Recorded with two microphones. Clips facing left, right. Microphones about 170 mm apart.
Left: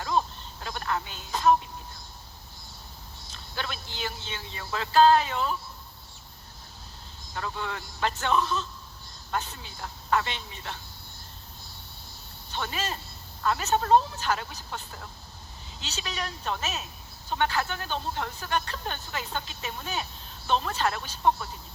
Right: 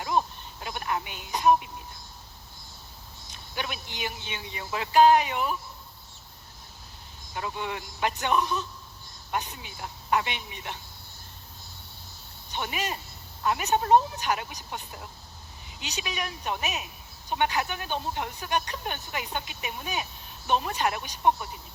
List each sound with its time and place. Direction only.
0.0 s a sound: 15° right (ahead or behind)
3.3 s a woman's voice: 15° right (ahead or behind)
7.3 s a woman's voice: 15° right (ahead or behind)
12.5 s a woman's voice: 15° right (ahead or behind)